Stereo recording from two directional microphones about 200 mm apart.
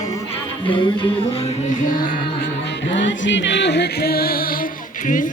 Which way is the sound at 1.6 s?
40° left (ahead or behind).